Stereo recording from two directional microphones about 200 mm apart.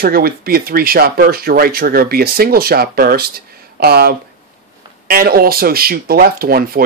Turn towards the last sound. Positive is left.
turn(degrees=-50)  # may be behind; listen again after turning